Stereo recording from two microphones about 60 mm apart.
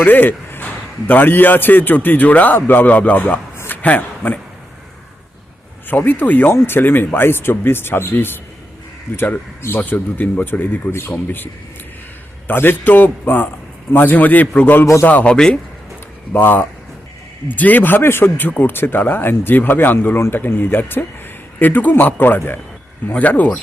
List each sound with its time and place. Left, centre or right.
0.0 s a man's voice: left
3.7 s a sound: left
5.9 s a man's voice: left
6.5 s speech: left
10.9 s speech: left
12.5 s a man's voice: left
15.3 s speech: centre
16.3 s speech: left
18.4 s a man's voice: left